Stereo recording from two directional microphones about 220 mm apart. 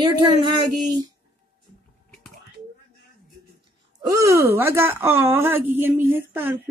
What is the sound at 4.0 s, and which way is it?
Speech, 15° right (ahead or behind).